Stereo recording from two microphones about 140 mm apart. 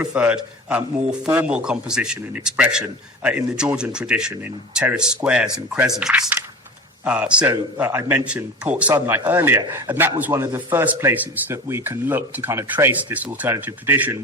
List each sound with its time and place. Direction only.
0.0 s a man's voice: 10° right (ahead or behind)